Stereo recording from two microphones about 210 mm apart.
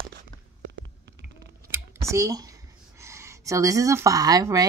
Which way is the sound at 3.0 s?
15° right (ahead or behind).